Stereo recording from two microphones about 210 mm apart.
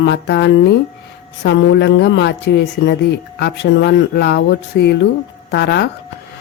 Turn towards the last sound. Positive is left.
turn(degrees=55)  # may be behind; listen again after turning